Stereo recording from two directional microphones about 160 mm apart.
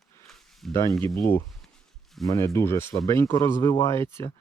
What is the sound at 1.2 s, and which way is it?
Speech, 15° left (ahead or behind).